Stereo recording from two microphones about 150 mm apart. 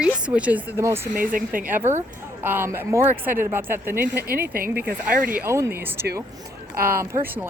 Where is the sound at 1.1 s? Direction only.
65° right (ahead or behind).